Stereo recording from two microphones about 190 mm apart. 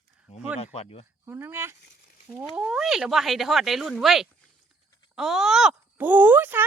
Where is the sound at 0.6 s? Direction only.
30° left (ahead or behind).